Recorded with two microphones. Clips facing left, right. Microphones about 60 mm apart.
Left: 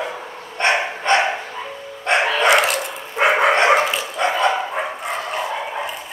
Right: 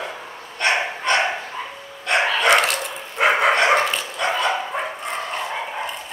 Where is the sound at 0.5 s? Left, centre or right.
Left.